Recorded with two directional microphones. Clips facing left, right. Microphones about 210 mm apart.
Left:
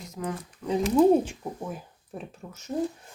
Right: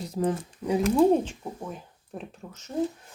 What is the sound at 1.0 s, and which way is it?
Speech, 5° left (ahead or behind).